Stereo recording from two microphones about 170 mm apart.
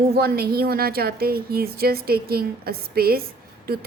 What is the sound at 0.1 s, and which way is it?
A woman's voice, 65° right (ahead or behind).